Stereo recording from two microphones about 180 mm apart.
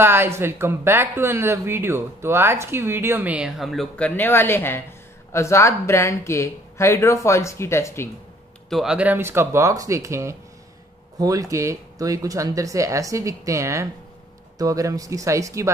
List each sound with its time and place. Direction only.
0.0 s speech: 15° right (ahead or behind); by 8.1 s 15° left (ahead or behind)
8.6 s speech: centre (ahead or behind)